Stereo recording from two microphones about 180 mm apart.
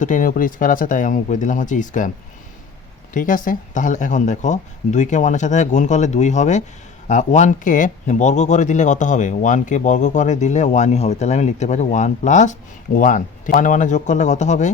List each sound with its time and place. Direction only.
0.0 s speech: 45° left (ahead or behind)
3.1 s speech: 50° left (ahead or behind)